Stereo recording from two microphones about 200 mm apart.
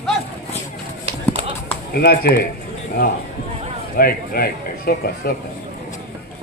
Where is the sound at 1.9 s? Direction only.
50° left (ahead or behind).